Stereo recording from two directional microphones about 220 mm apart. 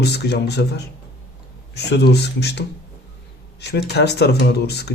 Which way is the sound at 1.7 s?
50° left (ahead or behind).